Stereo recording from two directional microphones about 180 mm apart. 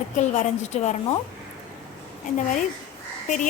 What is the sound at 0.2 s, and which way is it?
Speech, 40° left (ahead or behind).